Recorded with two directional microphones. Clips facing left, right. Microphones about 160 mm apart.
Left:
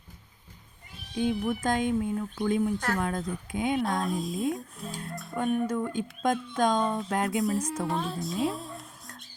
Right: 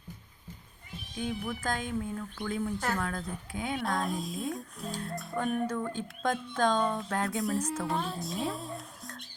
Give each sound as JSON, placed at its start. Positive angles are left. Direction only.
{"t": 1.1, "sound": "speech", "side_deg": 25}
{"t": 3.8, "sound": "speech", "side_deg": 0}
{"t": 5.7, "sound": "speech", "side_deg": 15}
{"t": 7.3, "sound": "a woman's voice", "side_deg": 0}